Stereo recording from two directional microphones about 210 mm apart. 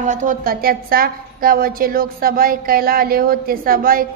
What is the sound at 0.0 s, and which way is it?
A woman's voice, 35° right (ahead or behind).